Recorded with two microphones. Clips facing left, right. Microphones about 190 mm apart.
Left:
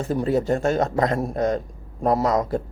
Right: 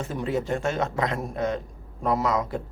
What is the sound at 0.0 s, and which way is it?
Speech, 40° left (ahead or behind).